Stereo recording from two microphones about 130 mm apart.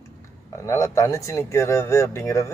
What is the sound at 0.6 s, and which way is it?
Speech, 25° left (ahead or behind).